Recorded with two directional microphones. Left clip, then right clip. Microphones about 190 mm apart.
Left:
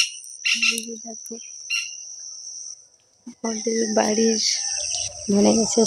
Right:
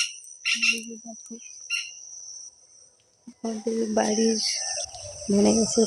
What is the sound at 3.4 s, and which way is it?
Speech, 40° left (ahead or behind).